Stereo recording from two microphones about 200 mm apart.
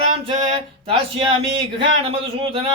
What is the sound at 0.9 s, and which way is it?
Speech, 30° right (ahead or behind).